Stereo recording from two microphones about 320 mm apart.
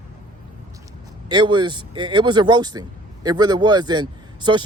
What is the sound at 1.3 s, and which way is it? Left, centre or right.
Speech, centre.